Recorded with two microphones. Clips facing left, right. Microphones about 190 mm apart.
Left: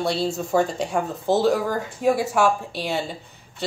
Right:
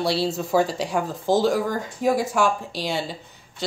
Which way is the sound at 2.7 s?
60° left (ahead or behind).